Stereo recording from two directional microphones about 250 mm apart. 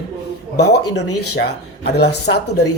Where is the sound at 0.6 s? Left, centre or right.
Left.